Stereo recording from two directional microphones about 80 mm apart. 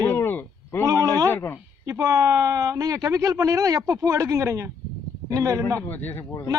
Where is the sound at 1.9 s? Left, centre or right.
Right.